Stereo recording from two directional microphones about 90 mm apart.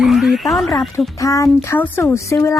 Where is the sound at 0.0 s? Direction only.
Centre (ahead or behind).